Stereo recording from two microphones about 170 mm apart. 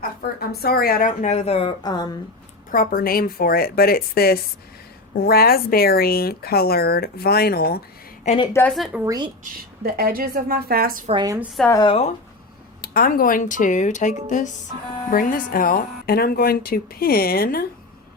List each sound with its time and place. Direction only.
0.0 s speech: 65° left (ahead or behind); by 2.1 s 25° left (ahead or behind)
2.7 s speech: 60° left (ahead or behind)
8.2 s a woman's voice: 40° left (ahead or behind)
8.9 s speech: 20° right (ahead or behind)
9.4 s a woman's voice: 60° right (ahead or behind)
11.7 s speech: 25° left (ahead or behind)
12.8 s speech: 60° left (ahead or behind)